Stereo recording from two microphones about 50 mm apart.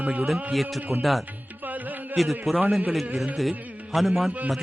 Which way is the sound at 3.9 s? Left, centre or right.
Centre.